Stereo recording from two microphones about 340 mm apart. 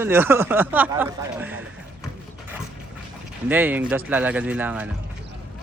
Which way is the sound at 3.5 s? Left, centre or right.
Centre.